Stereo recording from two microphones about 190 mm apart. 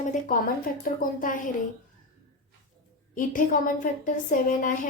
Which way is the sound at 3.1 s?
45° left (ahead or behind).